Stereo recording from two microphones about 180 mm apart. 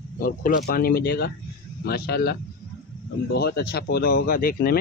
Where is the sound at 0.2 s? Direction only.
55° left (ahead or behind).